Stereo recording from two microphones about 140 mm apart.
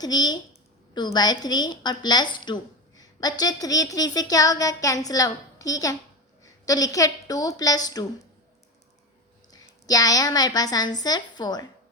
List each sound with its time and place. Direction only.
0.0 s a woman's voice: 30° left (ahead or behind)
9.5 s a woman's voice: 25° left (ahead or behind)